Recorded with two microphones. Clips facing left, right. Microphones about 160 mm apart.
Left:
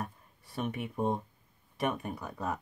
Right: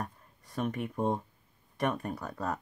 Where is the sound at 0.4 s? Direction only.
5° left (ahead or behind).